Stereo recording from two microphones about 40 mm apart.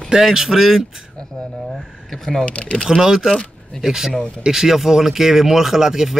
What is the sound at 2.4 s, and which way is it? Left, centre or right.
Speech, left.